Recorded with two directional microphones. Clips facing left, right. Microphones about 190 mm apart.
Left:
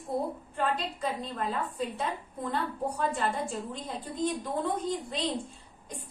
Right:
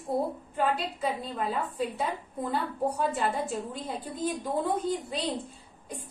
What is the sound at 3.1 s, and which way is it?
Speech, 5° right (ahead or behind).